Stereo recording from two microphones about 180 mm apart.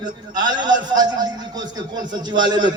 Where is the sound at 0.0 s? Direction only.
25° right (ahead or behind).